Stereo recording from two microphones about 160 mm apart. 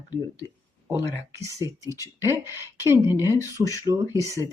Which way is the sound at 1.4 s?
20° right (ahead or behind).